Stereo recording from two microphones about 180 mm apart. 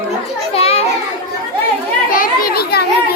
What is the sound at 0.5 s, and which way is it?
Children playing, 35° left (ahead or behind).